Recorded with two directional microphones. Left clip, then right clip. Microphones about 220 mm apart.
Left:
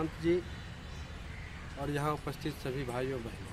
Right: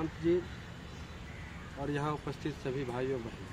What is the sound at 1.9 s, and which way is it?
Speech, centre (ahead or behind).